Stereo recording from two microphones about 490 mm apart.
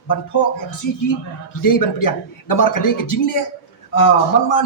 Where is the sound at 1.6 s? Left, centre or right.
Left.